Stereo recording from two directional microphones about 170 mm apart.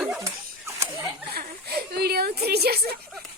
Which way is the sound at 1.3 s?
65° right (ahead or behind).